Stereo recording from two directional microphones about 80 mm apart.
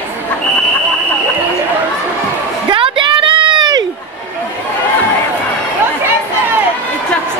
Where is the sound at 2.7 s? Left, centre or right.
Right.